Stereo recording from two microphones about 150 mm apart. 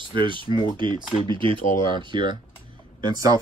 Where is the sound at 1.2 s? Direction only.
35° right (ahead or behind).